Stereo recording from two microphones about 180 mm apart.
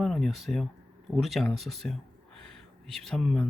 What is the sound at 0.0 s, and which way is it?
Speech, centre (ahead or behind).